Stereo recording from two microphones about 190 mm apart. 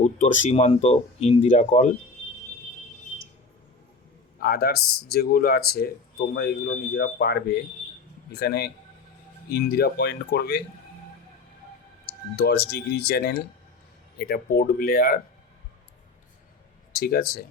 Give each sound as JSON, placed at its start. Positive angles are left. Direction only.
{"t": 0.0, "sound": "speech", "side_deg": 40}
{"t": 4.4, "sound": "a man's voice", "side_deg": 50}
{"t": 12.4, "sound": "speech", "side_deg": 60}
{"t": 16.9, "sound": "speech", "side_deg": 55}